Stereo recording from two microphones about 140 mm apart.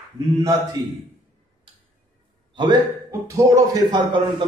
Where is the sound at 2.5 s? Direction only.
25° right (ahead or behind).